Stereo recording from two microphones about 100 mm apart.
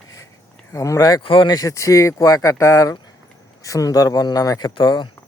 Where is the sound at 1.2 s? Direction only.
55° left (ahead or behind).